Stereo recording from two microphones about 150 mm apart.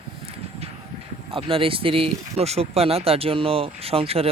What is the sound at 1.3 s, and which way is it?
Speech, 35° right (ahead or behind).